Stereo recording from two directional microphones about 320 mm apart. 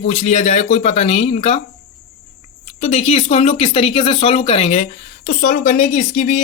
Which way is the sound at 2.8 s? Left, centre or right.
Left.